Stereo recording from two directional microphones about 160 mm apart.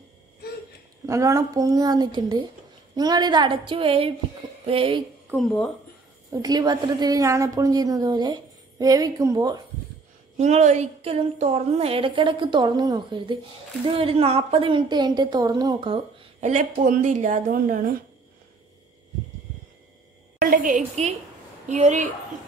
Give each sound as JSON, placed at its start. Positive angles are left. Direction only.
{"t": 1.0, "sound": "a woman's voice", "side_deg": -20}
{"t": 5.3, "sound": "speech", "side_deg": 0}
{"t": 6.3, "sound": "a woman's voice", "side_deg": -20}
{"t": 10.3, "sound": "a woman's voice", "side_deg": -45}
{"t": 20.3, "sound": "a woman's voice", "side_deg": -60}